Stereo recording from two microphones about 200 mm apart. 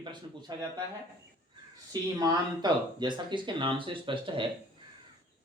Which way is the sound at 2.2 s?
20° right (ahead or behind).